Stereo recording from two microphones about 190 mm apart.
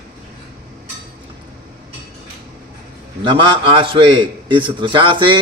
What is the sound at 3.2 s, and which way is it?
A man's voice, 25° right (ahead or behind).